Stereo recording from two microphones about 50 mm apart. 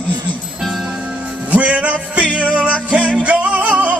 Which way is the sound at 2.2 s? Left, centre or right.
Left.